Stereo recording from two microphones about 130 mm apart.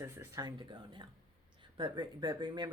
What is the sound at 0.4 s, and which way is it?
Speech, 35° right (ahead or behind).